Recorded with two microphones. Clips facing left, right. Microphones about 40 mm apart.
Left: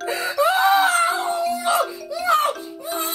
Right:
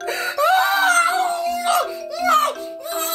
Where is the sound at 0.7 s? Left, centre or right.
Left.